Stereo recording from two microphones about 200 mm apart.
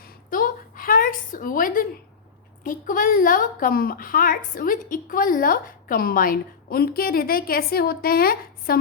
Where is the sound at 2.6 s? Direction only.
45° left (ahead or behind).